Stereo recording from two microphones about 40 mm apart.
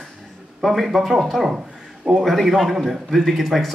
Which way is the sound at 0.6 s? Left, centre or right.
Centre.